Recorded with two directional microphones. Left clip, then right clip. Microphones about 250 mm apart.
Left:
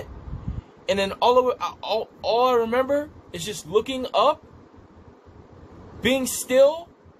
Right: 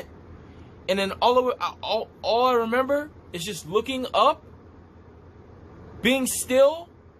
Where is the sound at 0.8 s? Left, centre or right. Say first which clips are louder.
Left 1 dB; centre.